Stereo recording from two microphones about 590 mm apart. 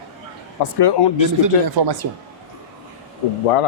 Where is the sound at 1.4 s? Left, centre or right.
Right.